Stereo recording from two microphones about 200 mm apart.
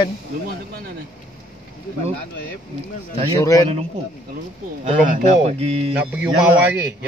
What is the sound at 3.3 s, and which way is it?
Speech, 15° left (ahead or behind).